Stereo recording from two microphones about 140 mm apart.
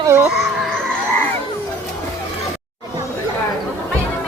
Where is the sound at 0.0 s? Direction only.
20° right (ahead or behind).